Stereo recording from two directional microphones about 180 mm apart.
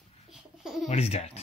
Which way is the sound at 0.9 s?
35° left (ahead or behind).